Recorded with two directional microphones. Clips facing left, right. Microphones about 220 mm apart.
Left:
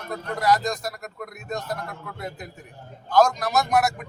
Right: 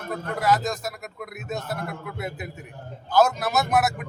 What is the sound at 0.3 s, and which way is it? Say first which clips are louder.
A man's voice: left 1 dB; 5° right (ahead or behind).